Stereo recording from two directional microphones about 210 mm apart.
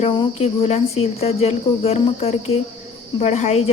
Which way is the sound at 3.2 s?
30° left (ahead or behind).